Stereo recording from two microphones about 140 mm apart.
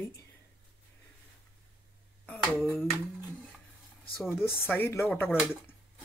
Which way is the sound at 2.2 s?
10° left (ahead or behind).